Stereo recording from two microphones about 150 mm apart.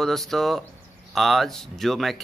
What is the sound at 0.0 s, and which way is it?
Speech, centre (ahead or behind).